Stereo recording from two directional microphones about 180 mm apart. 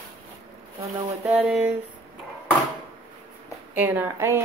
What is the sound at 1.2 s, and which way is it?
Speech, centre (ahead or behind).